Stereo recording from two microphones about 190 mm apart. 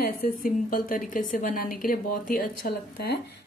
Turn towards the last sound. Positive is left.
turn(degrees=55)  # may be behind; listen again after turning